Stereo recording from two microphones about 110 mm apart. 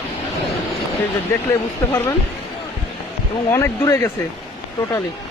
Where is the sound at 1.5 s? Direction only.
25° left (ahead or behind).